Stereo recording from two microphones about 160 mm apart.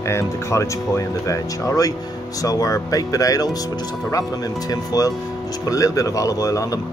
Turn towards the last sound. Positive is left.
turn(degrees=20)  # may be behind; listen again after turning